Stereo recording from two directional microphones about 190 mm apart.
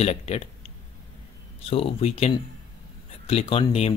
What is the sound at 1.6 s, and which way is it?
Speech, 30° left (ahead or behind).